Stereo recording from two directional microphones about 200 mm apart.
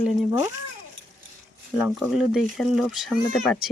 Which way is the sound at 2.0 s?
5° right (ahead or behind).